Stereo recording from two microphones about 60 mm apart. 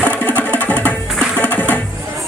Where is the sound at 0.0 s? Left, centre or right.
Left.